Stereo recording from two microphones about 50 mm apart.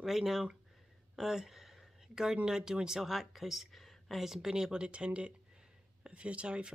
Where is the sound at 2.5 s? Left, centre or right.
Centre.